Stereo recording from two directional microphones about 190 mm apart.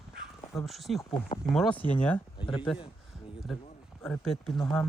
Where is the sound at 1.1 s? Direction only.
30° left (ahead or behind).